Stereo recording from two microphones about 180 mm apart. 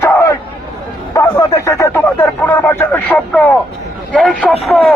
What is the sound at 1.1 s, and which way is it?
A man's voice, 15° left (ahead or behind).